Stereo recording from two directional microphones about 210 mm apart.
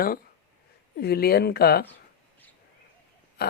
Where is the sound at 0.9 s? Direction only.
50° left (ahead or behind).